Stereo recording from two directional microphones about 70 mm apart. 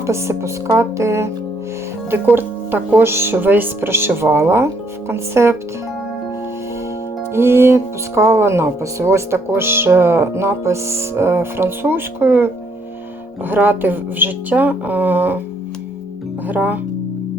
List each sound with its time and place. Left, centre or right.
0.0 s music: right
2.3 s speech: right
7.3 s a woman's voice: right
16.5 s a woman's voice: right